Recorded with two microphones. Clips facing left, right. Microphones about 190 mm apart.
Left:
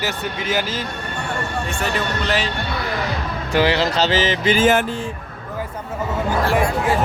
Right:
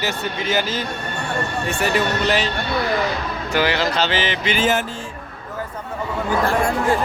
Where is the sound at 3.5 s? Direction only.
30° left (ahead or behind).